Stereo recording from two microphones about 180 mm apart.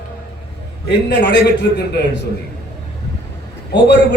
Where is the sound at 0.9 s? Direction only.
65° left (ahead or behind).